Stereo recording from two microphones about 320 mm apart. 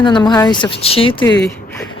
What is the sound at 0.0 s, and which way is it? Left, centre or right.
Speech, centre.